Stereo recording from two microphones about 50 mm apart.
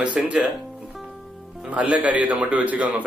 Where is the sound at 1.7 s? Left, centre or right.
Right.